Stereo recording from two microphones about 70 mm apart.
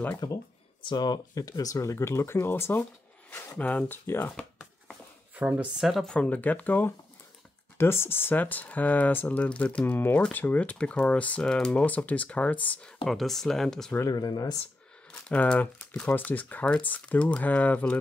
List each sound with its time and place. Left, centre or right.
0.2 s speech: left
0.9 s speech: left
5.3 s speech: right
5.8 s speech: centre
6.0 s speech: centre
7.7 s speech: left
13.0 s speech: centre
14.0 s speech: left
15.0 s speech: centre